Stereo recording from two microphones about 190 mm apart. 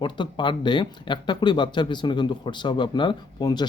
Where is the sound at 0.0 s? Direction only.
25° left (ahead or behind).